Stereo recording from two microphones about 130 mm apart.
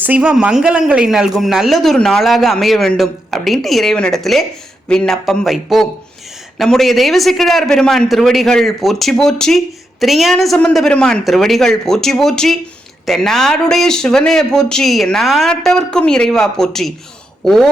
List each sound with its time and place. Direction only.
0.0 s a man's voice: 10° right (ahead or behind)